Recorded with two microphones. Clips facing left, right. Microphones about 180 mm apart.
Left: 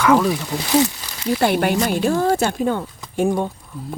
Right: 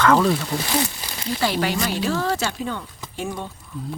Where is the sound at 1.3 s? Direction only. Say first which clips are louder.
Left 5 dB; 55° left (ahead or behind).